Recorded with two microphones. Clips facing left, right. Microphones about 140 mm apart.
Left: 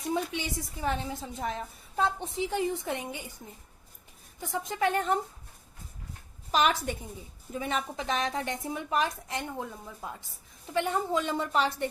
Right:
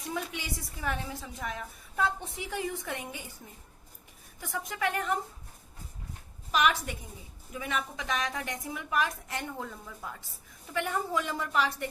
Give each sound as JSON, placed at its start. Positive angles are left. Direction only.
{"t": 0.1, "sound": "a woman's voice", "side_deg": 25}
{"t": 4.4, "sound": "a woman's voice", "side_deg": 25}
{"t": 6.5, "sound": "a woman's voice", "side_deg": 30}